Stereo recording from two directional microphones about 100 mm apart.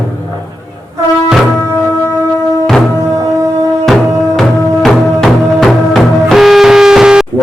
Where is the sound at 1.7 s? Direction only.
30° left (ahead or behind).